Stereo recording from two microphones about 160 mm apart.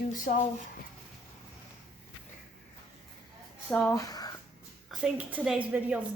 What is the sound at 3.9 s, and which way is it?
Speech, 20° left (ahead or behind).